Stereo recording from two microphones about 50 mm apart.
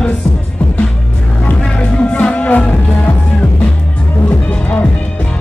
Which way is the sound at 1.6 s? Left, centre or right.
Left.